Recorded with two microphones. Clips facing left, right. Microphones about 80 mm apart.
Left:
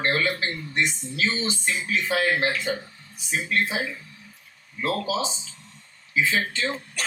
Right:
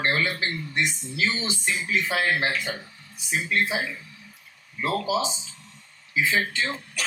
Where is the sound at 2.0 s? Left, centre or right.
Left.